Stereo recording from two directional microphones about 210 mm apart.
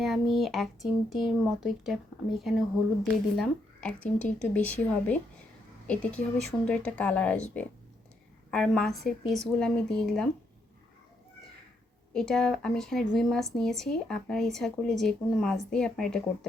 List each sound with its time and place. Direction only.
0.0 s speech: centre (ahead or behind)
12.1 s speech: centre (ahead or behind)